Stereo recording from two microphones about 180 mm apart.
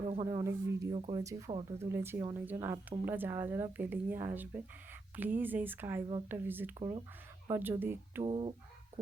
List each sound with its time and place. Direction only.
0.0 s a sound: 35° right (ahead or behind)
0.3 s speech: 15° right (ahead or behind)
0.9 s speech: 30° right (ahead or behind)
1.2 s speech: 15° right (ahead or behind)
6.7 s speech: 25° right (ahead or behind)
7.5 s speech: 10° right (ahead or behind)
8.2 s speech: 30° right (ahead or behind)